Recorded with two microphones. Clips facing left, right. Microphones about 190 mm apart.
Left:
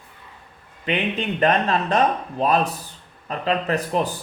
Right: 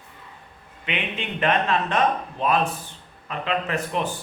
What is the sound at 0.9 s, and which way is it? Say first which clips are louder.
Speech: left 6 dB; 40° left (ahead or behind).